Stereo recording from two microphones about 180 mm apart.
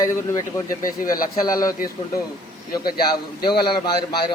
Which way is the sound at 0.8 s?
50° left (ahead or behind).